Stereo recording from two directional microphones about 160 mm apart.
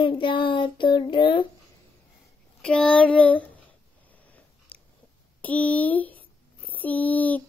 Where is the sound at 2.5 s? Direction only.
5° left (ahead or behind).